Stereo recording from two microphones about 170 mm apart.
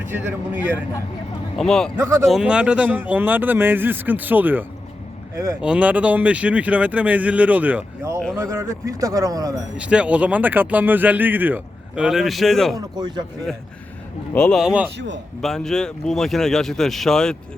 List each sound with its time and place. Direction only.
0.0 s speech: 10° right (ahead or behind)
1.5 s speech: 5° left (ahead or behind)
2.0 s speech: 15° right (ahead or behind)
2.2 s speech: 5° right (ahead or behind); by 9.6 s 20° right (ahead or behind)
9.7 s speech: 5° right (ahead or behind)
12.7 s speech: 25° right (ahead or behind)
14.3 s speech: 5° left (ahead or behind)
14.9 s a man's voice: 90° right
15.4 s speech: centre (ahead or behind)